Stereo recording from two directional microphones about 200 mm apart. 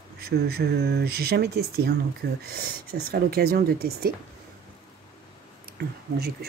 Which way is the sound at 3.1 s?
50° right (ahead or behind).